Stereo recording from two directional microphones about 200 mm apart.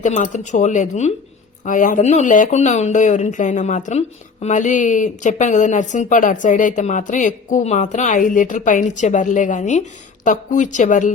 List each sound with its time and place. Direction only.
0.0 s speech: 35° left (ahead or behind)